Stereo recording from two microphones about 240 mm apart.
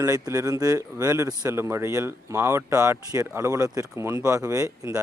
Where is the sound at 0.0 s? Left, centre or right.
Centre.